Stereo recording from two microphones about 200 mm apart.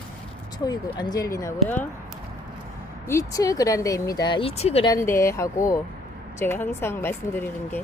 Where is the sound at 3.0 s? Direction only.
15° left (ahead or behind).